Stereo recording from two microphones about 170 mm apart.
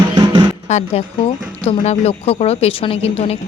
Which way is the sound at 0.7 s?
40° left (ahead or behind).